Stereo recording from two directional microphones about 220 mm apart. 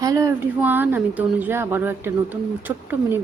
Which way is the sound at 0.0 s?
15° right (ahead or behind).